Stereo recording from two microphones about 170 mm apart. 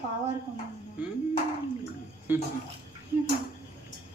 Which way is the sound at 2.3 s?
10° right (ahead or behind).